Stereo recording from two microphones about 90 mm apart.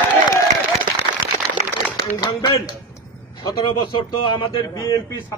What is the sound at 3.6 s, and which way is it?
Speech, 65° left (ahead or behind).